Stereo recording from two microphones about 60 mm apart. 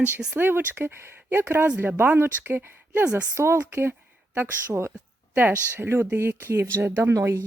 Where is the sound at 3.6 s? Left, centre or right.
Right.